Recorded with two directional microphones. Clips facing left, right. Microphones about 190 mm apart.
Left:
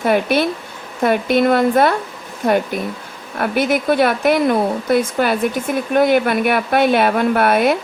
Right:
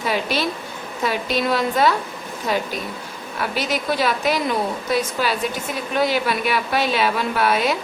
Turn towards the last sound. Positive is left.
turn(degrees=55)  # may be behind; listen again after turning